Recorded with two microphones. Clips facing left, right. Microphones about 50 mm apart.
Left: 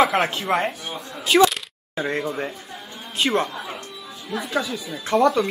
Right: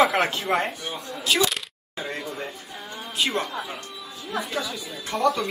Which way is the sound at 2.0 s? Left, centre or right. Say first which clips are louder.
Left 6 dB; left.